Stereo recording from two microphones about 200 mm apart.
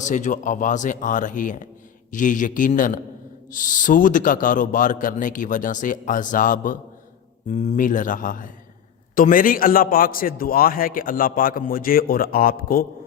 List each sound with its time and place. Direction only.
0.0 s a man's voice: 40° left (ahead or behind)